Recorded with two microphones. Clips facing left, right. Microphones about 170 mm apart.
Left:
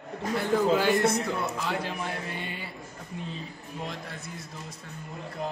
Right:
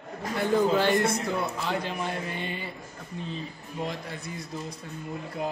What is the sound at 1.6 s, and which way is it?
A man's voice, centre (ahead or behind).